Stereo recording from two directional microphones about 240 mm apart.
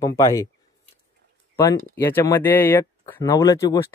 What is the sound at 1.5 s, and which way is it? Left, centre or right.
Speech, centre.